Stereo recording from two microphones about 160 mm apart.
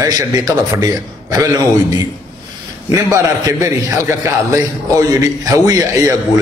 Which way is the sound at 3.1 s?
20° right (ahead or behind).